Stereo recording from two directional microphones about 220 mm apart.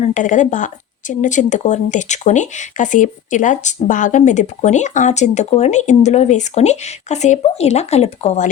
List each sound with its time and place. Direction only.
0.0 s speech: 35° left (ahead or behind)